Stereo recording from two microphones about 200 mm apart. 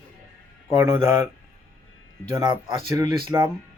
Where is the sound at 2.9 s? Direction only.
15° right (ahead or behind).